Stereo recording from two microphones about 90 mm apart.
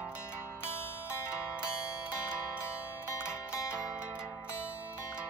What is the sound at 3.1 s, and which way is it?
Zither, 30° left (ahead or behind).